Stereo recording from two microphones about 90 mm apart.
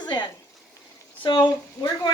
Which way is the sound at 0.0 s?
55° left (ahead or behind).